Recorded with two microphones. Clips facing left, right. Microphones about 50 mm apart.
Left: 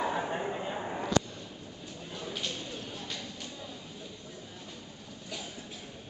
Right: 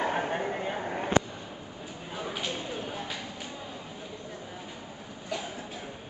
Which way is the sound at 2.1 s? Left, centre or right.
Centre.